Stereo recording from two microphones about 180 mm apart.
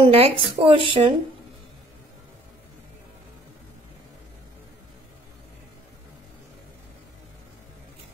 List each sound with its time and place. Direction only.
0.0 s speech: 35° right (ahead or behind)